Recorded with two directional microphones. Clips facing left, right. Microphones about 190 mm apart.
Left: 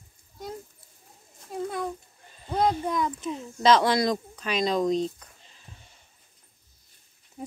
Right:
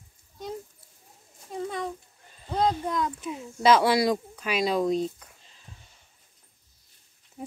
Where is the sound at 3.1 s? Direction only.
10° right (ahead or behind).